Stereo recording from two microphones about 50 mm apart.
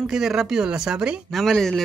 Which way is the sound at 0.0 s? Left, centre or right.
Centre.